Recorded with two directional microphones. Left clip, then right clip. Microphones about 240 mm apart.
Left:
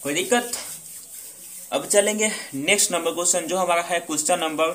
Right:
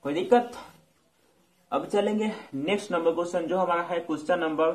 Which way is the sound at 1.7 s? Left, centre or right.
Centre.